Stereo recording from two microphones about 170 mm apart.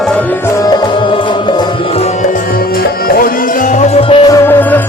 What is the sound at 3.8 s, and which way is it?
Music, 35° left (ahead or behind).